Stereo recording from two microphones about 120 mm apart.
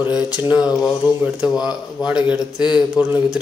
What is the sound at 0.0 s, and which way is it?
Speech, 10° right (ahead or behind).